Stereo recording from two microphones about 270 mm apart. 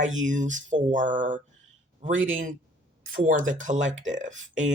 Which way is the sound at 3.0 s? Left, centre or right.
Right.